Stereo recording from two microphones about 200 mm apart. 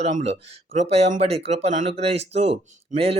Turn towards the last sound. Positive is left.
turn(degrees=-30)  # may be behind; listen again after turning